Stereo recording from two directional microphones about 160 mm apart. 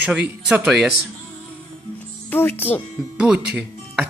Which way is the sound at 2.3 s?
10° left (ahead or behind).